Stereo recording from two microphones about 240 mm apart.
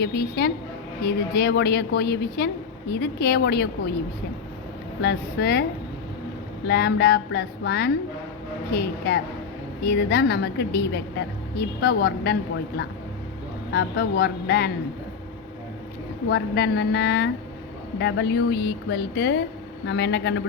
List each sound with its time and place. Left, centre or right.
0.0 s a woman's voice: left
5.0 s a woman's voice: left
6.7 s a sound: left
8.7 s a woman's voice: left
11.8 s a sound: left
13.7 s a woman's voice: left
16.3 s a woman's voice: left